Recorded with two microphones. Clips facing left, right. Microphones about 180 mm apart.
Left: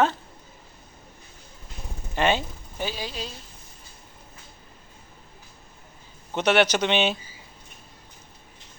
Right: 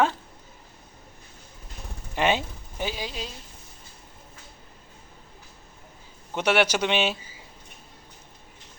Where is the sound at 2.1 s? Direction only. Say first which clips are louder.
Left 1 dB; 10° right (ahead or behind).